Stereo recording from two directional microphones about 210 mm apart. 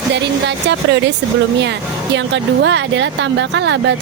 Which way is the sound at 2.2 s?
60° right (ahead or behind).